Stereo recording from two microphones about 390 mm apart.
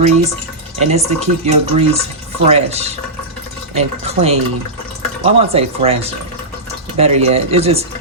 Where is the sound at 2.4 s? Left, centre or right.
Centre.